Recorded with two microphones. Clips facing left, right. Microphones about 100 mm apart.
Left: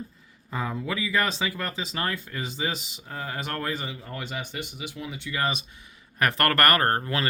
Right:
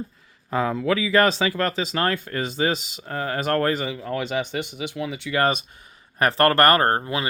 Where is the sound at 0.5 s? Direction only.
85° right; by 5.9 s 50° right (ahead or behind).